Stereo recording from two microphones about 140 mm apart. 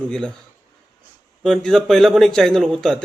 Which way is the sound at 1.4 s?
5° left (ahead or behind).